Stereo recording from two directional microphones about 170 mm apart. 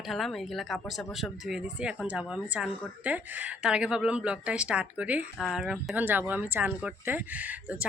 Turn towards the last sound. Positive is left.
turn(degrees=-10)  # may be behind; listen again after turning